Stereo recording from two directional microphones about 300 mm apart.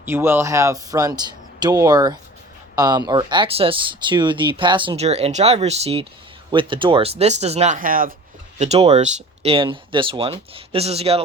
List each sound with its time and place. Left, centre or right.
0.0 s speech: centre